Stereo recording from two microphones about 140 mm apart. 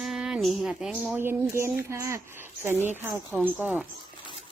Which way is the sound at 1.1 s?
15° right (ahead or behind).